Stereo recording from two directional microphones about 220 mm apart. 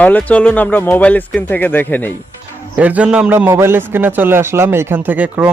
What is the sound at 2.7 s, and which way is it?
A man's voice, 5° right (ahead or behind).